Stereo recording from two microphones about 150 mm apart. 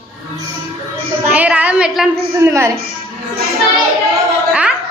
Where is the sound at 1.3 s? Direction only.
10° right (ahead or behind).